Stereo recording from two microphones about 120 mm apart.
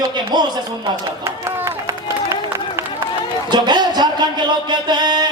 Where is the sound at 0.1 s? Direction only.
40° right (ahead or behind).